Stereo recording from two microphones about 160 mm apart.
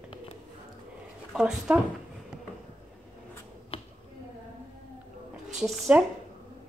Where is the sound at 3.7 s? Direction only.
35° left (ahead or behind).